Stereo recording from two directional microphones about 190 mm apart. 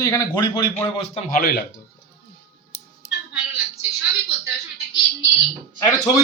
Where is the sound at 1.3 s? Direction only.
50° left (ahead or behind).